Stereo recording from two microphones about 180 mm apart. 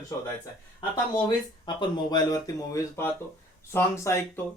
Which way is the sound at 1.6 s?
25° left (ahead or behind).